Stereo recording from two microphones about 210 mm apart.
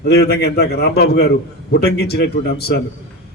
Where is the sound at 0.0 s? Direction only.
50° left (ahead or behind).